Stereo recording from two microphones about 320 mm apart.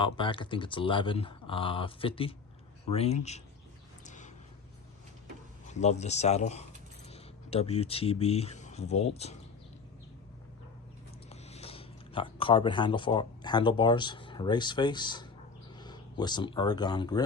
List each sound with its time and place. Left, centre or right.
0.0 s speech: centre
4.0 s a sound: left
5.8 s speech: left
11.3 s speech: centre